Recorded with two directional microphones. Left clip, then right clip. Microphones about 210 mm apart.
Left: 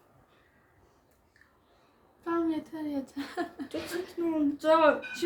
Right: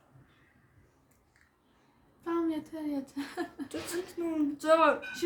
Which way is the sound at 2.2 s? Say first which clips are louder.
Left 2 dB; 5° right (ahead or behind).